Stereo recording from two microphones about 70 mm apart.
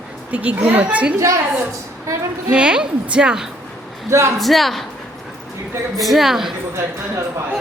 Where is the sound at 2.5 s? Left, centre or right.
Centre.